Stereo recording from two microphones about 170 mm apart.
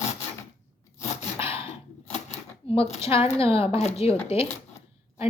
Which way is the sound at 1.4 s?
35° left (ahead or behind).